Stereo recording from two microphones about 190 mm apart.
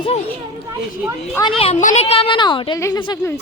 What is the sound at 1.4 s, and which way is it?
A woman's voice, 30° left (ahead or behind).